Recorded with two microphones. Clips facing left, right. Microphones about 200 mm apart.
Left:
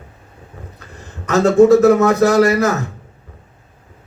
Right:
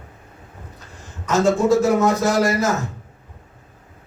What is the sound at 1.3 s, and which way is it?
A man's voice, 65° left (ahead or behind).